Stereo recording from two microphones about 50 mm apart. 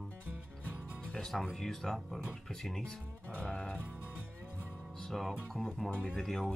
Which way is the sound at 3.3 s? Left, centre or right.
Left.